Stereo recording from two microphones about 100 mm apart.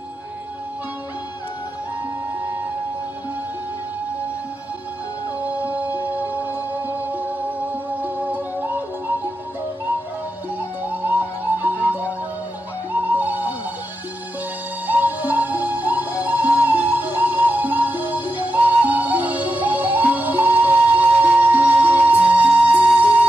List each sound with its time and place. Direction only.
5.4 s music: 15° right (ahead or behind)
10.9 s music: 15° right (ahead or behind)
14.9 s music: 15° right (ahead or behind)